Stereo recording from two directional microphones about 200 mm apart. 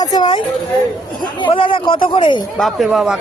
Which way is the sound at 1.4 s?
25° left (ahead or behind).